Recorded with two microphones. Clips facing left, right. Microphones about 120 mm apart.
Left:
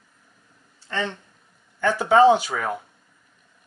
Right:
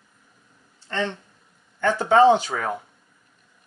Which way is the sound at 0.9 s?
5° left (ahead or behind).